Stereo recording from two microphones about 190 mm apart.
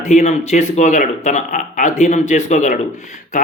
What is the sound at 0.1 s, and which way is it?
Speech, 40° left (ahead or behind).